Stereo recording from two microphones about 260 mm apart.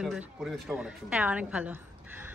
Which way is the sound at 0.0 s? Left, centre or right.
Centre.